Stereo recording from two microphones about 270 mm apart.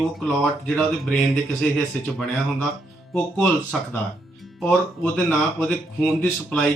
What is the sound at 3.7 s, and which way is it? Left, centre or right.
Speech, centre.